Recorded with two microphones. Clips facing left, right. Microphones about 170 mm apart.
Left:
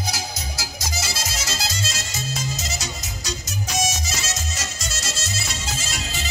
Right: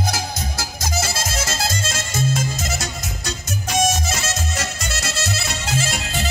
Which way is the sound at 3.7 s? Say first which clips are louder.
Right 7 dB; 55° right (ahead or behind).